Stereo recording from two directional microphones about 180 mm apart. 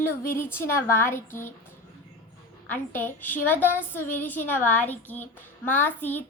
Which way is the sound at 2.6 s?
10° left (ahead or behind).